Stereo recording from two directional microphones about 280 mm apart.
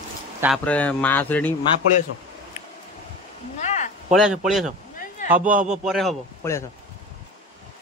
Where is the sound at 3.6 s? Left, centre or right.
Left.